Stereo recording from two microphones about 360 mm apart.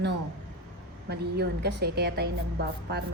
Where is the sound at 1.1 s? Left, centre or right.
Right.